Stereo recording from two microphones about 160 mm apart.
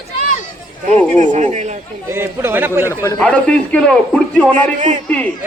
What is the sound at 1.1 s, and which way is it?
Speech, 50° right (ahead or behind).